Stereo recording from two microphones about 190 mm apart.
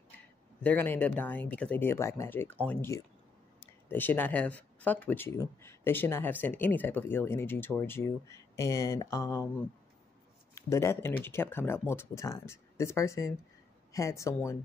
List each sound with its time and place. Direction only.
0.6 s speech: 10° left (ahead or behind)
10.5 s speech: 15° left (ahead or behind)